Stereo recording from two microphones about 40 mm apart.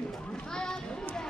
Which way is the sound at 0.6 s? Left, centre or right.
Centre.